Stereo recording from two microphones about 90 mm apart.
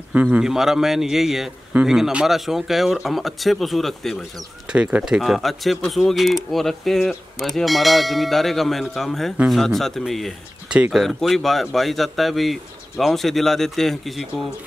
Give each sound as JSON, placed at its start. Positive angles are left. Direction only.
{"t": 0.1, "sound": "speech", "side_deg": -15}
{"t": 0.5, "sound": "speech", "side_deg": -5}
{"t": 4.6, "sound": "speech", "side_deg": -10}
{"t": 10.7, "sound": "speech", "side_deg": -10}